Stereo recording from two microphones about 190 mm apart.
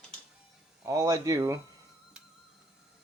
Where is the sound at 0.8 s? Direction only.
15° right (ahead or behind).